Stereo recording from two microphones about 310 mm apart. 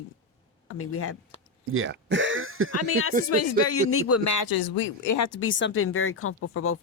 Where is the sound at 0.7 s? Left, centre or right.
Left.